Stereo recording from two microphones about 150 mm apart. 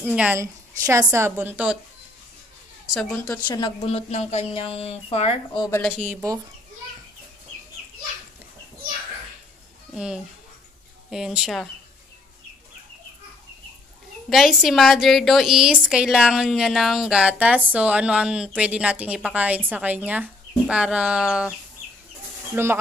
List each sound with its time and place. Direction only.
0.0 s a woman's voice: 10° right (ahead or behind)
0.4 s a woman's voice: 20° right (ahead or behind)
2.9 s a woman's voice: 5° left (ahead or behind)
3.4 s speech: 30° left (ahead or behind)
3.9 s speech: 45° left (ahead or behind)
6.0 s speech: 25° right (ahead or behind)
9.9 s a woman's voice: 5° right (ahead or behind)
14.3 s a woman's voice: centre (ahead or behind)
22.6 s a woman's voice: 15° right (ahead or behind)